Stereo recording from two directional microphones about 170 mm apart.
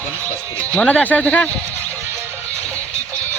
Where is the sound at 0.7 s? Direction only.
5° left (ahead or behind).